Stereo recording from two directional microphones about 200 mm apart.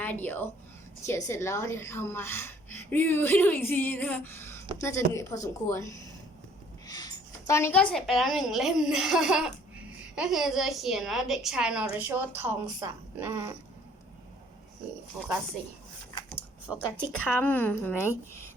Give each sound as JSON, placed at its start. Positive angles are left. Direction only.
{"t": 0.0, "sound": "a woman's voice", "side_deg": 10}
{"t": 15.1, "sound": "a woman's voice", "side_deg": -15}
{"t": 17.1, "sound": "speech", "side_deg": 10}